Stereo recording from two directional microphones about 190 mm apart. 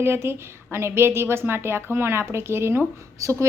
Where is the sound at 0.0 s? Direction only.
10° right (ahead or behind).